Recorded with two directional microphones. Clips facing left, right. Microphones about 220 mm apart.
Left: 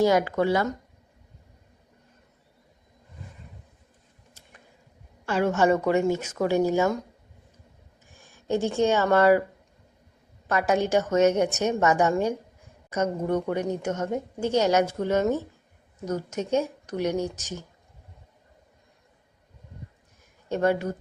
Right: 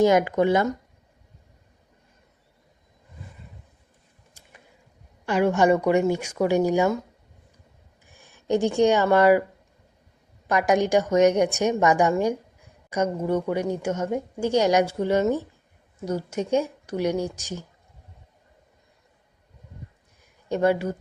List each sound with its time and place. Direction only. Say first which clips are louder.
0.0 s speech: right 3 dB; 20° right (ahead or behind)
5.2 s a woman's voice: right 2 dB; 15° right (ahead or behind)
8.1 s a sound: right 1 dB; 40° right (ahead or behind)
8.4 s a woman's voice: right 3 dB; 15° right (ahead or behind)
10.4 s a woman's voice: right 3 dB; 15° right (ahead or behind)
20.5 s a woman's voice: right 2 dB; 10° right (ahead or behind)